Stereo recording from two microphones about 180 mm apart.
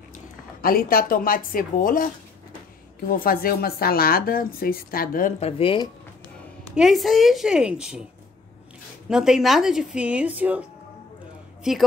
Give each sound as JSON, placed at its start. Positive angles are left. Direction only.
{"t": 0.1, "sound": "speech", "side_deg": 55}
{"t": 3.1, "sound": "speech", "side_deg": 50}
{"t": 5.4, "sound": "speech", "side_deg": 30}
{"t": 6.2, "sound": "a woman's voice", "side_deg": 0}
{"t": 9.1, "sound": "a woman's voice", "side_deg": -5}
{"t": 11.7, "sound": "a woman's voice", "side_deg": -5}